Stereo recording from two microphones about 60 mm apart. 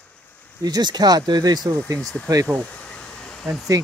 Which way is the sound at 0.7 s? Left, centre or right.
Right.